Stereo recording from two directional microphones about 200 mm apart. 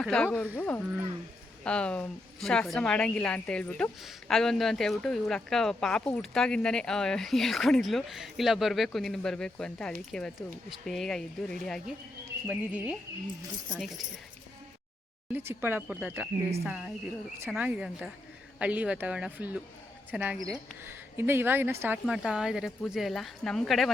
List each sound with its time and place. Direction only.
0.0 s speech: 5° left (ahead or behind)
15.3 s speech: 10° right (ahead or behind)